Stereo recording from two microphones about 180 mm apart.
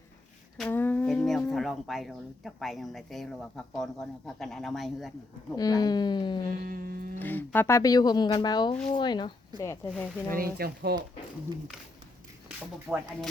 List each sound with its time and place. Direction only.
0.5 s a sound: 5° left (ahead or behind)
1.5 s speech: centre (ahead or behind)
5.5 s speech: 20° left (ahead or behind)
6.7 s music: 55° right (ahead or behind)
7.2 s speech: 10° left (ahead or behind)
10.3 s speech: 55° right (ahead or behind)
12.9 s speech: 5° right (ahead or behind)